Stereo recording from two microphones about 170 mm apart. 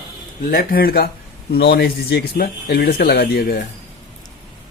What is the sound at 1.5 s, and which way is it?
Speech, 75° left (ahead or behind).